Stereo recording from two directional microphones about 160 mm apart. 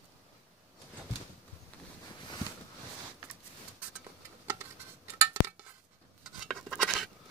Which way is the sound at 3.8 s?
15° right (ahead or behind).